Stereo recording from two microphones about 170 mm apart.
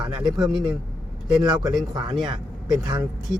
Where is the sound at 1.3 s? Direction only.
25° right (ahead or behind).